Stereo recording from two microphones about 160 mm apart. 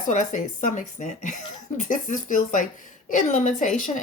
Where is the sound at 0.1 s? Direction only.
50° left (ahead or behind).